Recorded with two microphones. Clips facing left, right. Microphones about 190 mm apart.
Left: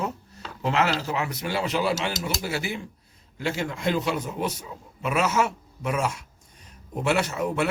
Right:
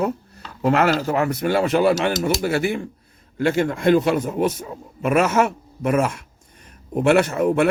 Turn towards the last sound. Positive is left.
turn(degrees=-55)  # may be behind; listen again after turning